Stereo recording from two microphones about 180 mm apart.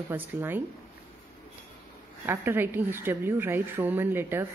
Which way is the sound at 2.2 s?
10° right (ahead or behind).